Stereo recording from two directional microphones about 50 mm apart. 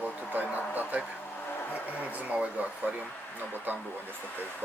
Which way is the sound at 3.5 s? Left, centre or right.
Right.